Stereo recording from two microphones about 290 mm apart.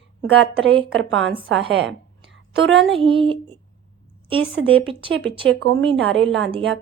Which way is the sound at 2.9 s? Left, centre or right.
Centre.